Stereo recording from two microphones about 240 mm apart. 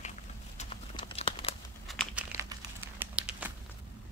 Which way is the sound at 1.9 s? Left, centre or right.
Centre.